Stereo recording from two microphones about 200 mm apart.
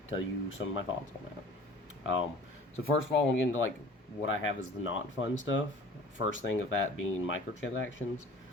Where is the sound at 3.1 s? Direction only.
60° left (ahead or behind).